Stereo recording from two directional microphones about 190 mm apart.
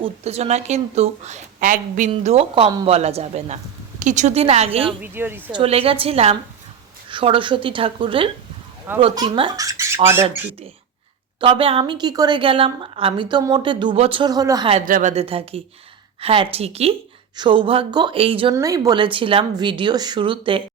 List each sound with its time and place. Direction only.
0.0 s a woman's voice: 35° right (ahead or behind)
5.0 s speech: 10° right (ahead or behind)
5.5 s a woman's voice: 30° right (ahead or behind)
11.3 s a woman's voice: 30° right (ahead or behind)
14.8 s a woman's voice: 45° right (ahead or behind)
15.1 s a woman's voice: 30° right (ahead or behind)
18.5 s a woman's voice: 15° right (ahead or behind)